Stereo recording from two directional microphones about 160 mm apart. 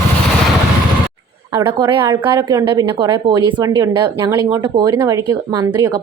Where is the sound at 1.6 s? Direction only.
30° right (ahead or behind).